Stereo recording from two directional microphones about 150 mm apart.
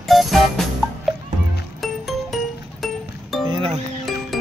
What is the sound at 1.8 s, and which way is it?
Music, centre (ahead or behind).